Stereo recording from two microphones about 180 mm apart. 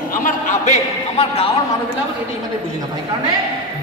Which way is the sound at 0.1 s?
45° left (ahead or behind).